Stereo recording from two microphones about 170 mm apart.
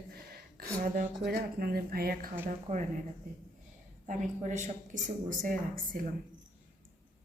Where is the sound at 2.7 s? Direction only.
40° right (ahead or behind).